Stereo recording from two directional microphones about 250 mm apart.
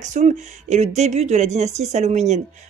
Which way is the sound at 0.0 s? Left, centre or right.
Right.